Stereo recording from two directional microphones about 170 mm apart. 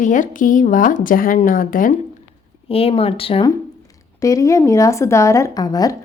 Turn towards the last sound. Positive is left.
turn(degrees=20)  # may be behind; listen again after turning